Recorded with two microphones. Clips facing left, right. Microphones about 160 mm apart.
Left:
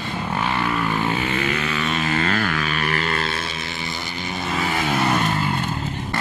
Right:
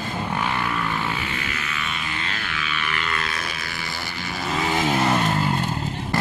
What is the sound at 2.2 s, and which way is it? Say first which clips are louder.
Music: left 9 dB; 50° left (ahead or behind).